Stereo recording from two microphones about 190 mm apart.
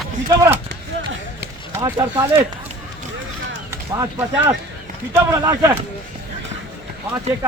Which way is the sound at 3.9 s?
15° right (ahead or behind).